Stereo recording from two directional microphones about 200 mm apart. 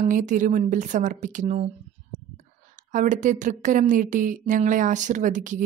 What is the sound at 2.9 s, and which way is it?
A woman's voice, 40° right (ahead or behind).